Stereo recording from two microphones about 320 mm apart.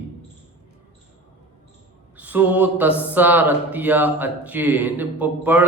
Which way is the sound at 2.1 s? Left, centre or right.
Centre.